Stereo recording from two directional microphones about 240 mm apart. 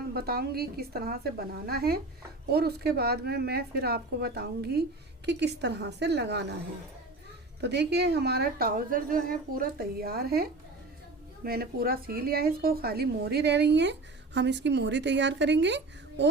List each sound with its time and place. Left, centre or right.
0.1 s a woman's voice: right
7.6 s a woman's voice: right